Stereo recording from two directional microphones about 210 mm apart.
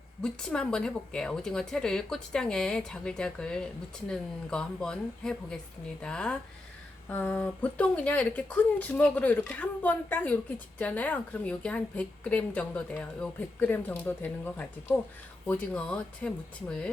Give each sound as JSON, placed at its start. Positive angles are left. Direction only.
{"t": 0.2, "sound": "a woman's voice", "side_deg": 5}